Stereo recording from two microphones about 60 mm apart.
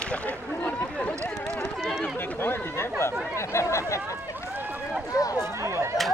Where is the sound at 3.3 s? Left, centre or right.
Left.